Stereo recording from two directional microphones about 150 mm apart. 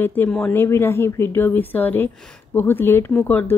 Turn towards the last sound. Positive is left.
turn(degrees=10)  # may be behind; listen again after turning